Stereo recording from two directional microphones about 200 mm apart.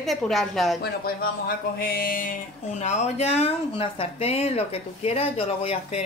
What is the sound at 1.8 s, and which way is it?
Speech, 45° left (ahead or behind).